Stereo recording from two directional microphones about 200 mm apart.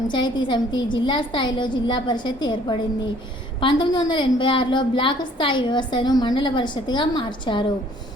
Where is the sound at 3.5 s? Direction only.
25° left (ahead or behind).